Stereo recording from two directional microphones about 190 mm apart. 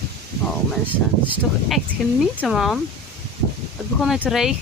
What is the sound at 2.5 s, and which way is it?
Speech, centre (ahead or behind).